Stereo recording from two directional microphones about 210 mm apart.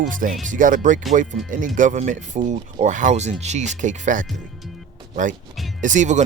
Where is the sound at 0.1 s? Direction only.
40° right (ahead or behind).